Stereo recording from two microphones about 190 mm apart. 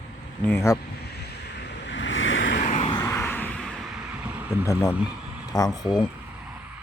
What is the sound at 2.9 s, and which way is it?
Vehicle, 15° left (ahead or behind).